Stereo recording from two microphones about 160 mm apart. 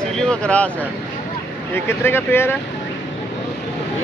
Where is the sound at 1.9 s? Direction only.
15° left (ahead or behind).